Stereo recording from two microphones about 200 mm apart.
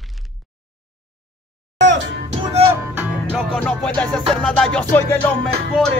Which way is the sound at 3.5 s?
5° left (ahead or behind).